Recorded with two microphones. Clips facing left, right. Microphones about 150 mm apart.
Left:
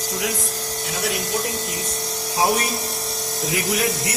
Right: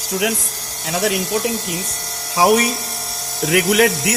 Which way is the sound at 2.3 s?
90° right.